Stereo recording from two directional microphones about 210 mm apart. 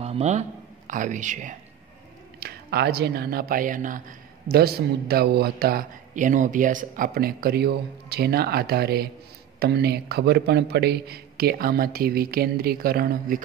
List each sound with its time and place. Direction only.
0.0 s speech: 30° right (ahead or behind)
2.4 s a man's voice: 50° right (ahead or behind)